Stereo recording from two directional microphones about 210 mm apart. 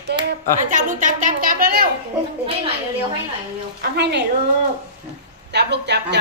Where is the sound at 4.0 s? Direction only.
55° right (ahead or behind).